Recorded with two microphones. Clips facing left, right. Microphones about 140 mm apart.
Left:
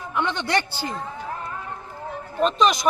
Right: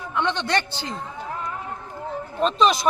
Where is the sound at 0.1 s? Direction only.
10° left (ahead or behind).